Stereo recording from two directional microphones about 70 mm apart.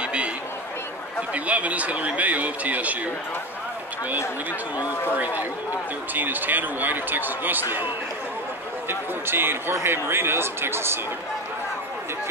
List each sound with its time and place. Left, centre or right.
0.0 s a sound: centre
1.3 s a man's voice: centre
5.1 s a man's voice: right
8.8 s speech: right